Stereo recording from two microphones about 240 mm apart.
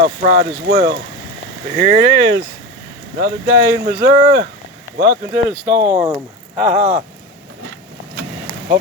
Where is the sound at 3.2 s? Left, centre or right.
Right.